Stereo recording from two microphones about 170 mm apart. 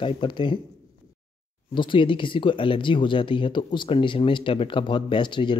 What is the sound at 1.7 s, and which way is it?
Speech, 30° left (ahead or behind).